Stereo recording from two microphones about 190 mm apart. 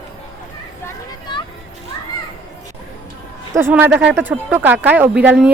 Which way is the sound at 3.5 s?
10° right (ahead or behind).